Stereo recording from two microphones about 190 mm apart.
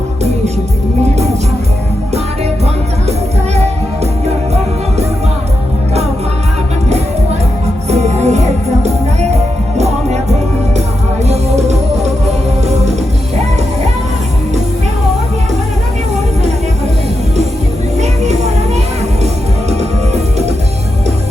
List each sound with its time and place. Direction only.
7.9 s music: 35° right (ahead or behind)
11.3 s music: 35° right (ahead or behind)
18.0 s music: 35° right (ahead or behind)